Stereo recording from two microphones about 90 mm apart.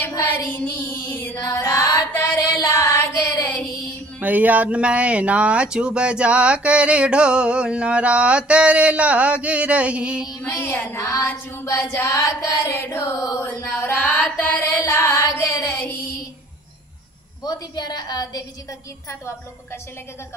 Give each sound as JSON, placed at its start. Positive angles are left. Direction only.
{"t": 0.5, "sound": "music", "side_deg": 20}
{"t": 1.4, "sound": "music", "side_deg": 35}
{"t": 4.2, "sound": "speech", "side_deg": -15}
{"t": 10.4, "sound": "music", "side_deg": 25}
{"t": 12.5, "sound": "music", "side_deg": 25}
{"t": 13.7, "sound": "music", "side_deg": 20}
{"t": 15.0, "sound": "music", "side_deg": 30}
{"t": 17.4, "sound": "a woman's voice", "side_deg": 50}